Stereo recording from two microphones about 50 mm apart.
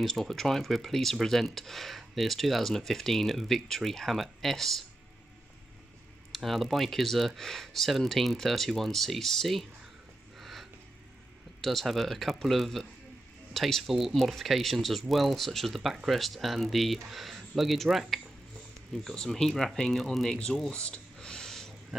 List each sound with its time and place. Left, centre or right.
0.0 s speech: centre
6.3 s speech: centre
10.3 s a sound: centre
11.6 s speech: centre
19.1 s speech: centre
20.7 s a sound: left